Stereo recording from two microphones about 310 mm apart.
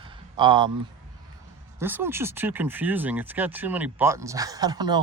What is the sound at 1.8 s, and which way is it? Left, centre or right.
Speech, centre.